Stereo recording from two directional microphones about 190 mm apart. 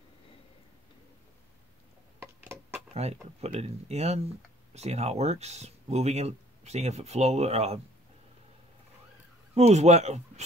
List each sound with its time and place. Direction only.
2.1 s a sound: 15° right (ahead or behind)
2.9 s speech: 35° right (ahead or behind)
9.5 s speech: 35° right (ahead or behind)